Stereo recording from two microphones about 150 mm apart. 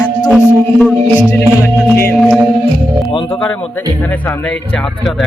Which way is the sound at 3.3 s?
10° left (ahead or behind).